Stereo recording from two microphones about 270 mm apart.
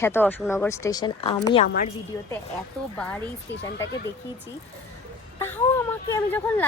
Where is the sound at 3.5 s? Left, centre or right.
Left.